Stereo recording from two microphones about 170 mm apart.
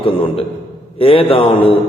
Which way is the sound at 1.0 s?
35° left (ahead or behind).